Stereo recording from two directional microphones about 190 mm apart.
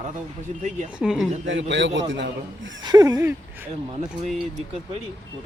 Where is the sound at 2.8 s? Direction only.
20° right (ahead or behind).